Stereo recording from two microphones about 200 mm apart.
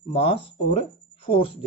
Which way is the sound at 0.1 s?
30° left (ahead or behind).